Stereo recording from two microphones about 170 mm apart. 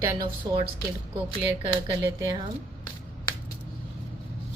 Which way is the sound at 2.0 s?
20° right (ahead or behind).